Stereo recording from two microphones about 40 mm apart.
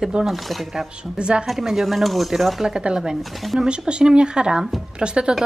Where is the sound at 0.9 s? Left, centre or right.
Right.